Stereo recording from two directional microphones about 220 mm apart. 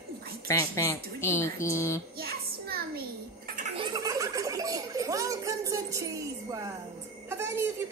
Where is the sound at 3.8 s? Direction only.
15° right (ahead or behind).